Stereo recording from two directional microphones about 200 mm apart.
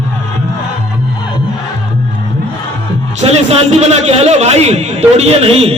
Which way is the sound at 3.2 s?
30° right (ahead or behind).